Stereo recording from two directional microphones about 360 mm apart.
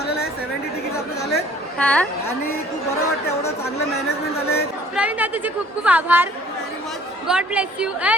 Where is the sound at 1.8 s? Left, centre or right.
Centre.